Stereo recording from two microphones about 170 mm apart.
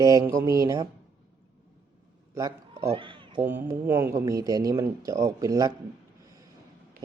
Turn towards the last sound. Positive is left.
turn(degrees=-20)  # may be behind; listen again after turning